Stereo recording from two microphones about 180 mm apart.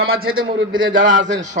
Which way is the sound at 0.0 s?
55° right (ahead or behind).